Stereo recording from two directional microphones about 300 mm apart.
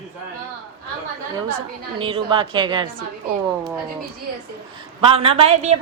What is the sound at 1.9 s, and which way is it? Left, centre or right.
Speech, centre.